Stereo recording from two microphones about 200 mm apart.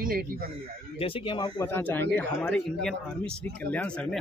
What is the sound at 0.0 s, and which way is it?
Speech, 45° right (ahead or behind).